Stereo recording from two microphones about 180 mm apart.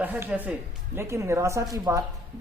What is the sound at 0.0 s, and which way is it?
Speech, 10° right (ahead or behind).